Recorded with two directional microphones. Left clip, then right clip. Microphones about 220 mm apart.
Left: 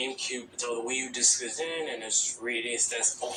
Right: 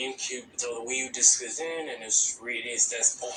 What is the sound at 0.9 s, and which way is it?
Speech, 25° left (ahead or behind).